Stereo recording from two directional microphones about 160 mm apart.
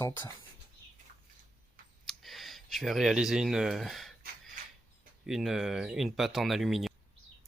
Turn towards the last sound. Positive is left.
turn(degrees=0)  # may be behind; listen again after turning